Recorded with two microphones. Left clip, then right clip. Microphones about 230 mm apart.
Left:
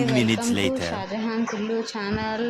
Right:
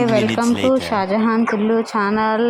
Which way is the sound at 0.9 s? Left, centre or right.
Right.